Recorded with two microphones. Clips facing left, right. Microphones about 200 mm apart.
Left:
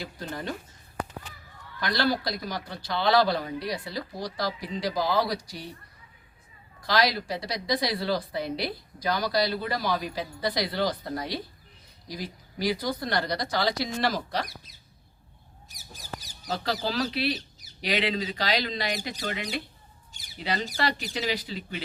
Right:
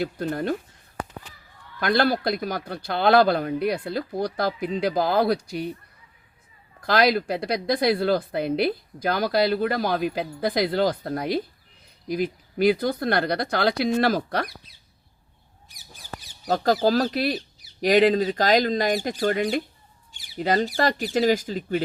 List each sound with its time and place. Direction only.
0.0 s speech: 55° right (ahead or behind)
1.8 s speech: 55° right (ahead or behind)
6.8 s speech: 55° right (ahead or behind)
15.7 s mouse: 40° left (ahead or behind)
16.8 s speech: 45° right (ahead or behind)